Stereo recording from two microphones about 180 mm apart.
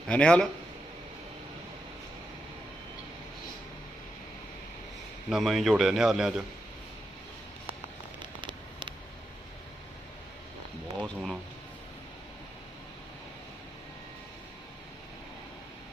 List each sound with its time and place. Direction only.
0.1 s a man's voice: 5° left (ahead or behind)
5.3 s a man's voice: centre (ahead or behind)
8.2 s a sound: 25° right (ahead or behind)
11.0 s speech: centre (ahead or behind)